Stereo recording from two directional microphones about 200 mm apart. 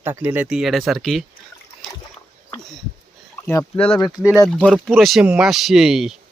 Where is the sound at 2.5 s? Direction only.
Centre (ahead or behind).